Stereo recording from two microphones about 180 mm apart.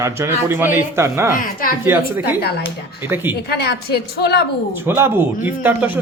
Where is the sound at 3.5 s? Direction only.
65° left (ahead or behind).